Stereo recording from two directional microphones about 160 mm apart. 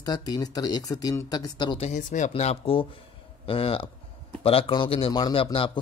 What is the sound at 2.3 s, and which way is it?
A man's voice, 40° left (ahead or behind).